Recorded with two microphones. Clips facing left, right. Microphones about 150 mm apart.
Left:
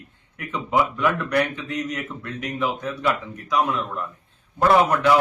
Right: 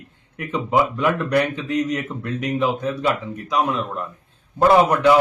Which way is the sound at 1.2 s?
35° right (ahead or behind).